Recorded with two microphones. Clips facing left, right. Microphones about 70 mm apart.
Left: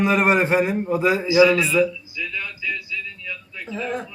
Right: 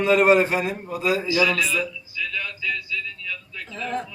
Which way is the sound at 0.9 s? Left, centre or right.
Left.